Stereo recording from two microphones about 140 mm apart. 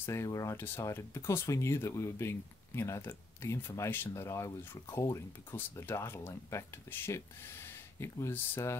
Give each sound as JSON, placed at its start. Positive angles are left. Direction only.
{"t": 0.0, "sound": "speech", "side_deg": 20}